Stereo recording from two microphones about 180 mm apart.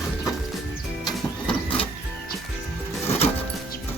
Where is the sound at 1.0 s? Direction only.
25° left (ahead or behind).